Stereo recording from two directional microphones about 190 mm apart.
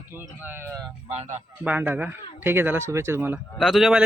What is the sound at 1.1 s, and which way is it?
Speech, 35° right (ahead or behind).